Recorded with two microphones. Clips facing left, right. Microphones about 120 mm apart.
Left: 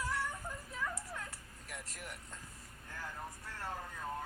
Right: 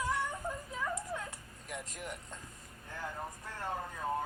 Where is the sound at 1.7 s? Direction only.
15° right (ahead or behind).